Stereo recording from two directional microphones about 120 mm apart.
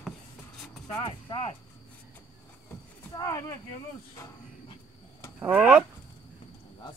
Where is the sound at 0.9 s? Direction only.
45° left (ahead or behind).